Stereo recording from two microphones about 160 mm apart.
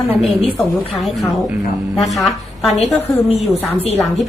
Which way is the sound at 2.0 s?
Centre (ahead or behind).